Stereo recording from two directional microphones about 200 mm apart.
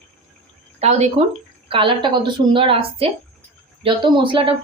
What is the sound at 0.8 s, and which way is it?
Speech, 35° right (ahead or behind).